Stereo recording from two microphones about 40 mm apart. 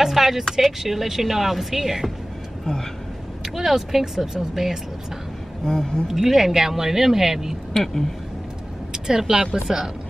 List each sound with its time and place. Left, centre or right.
0.0 s speech: centre
2.6 s speech: centre
3.4 s speech: centre
5.7 s speech: centre
6.0 s speech: centre
7.7 s a woman's voice: centre
8.9 s a sound: centre
9.7 s speech: centre